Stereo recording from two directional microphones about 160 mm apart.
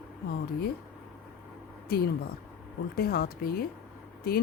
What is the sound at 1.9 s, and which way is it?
Speech, 75° left (ahead or behind).